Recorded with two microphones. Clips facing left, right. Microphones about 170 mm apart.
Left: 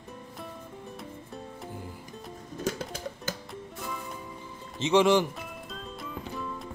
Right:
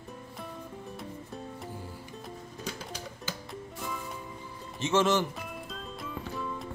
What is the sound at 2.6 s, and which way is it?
Music, 45° left (ahead or behind).